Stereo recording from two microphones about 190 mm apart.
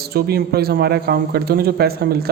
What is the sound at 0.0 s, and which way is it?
A woman's voice, 55° right (ahead or behind).